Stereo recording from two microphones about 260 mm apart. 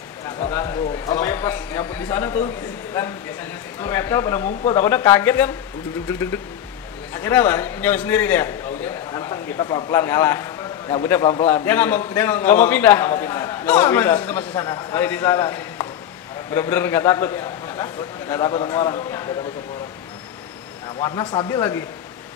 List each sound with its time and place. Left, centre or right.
0.5 s a sound: centre
3.8 s a man's voice: centre
21.0 s a man's voice: centre